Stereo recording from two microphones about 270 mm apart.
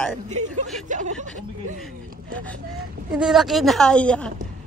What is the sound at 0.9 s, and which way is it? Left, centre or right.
Chuckle, right.